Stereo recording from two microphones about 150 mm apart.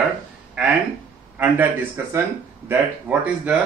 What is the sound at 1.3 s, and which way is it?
Speech, 10° right (ahead or behind).